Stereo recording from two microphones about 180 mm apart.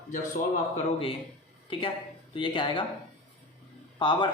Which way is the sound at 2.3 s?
25° left (ahead or behind).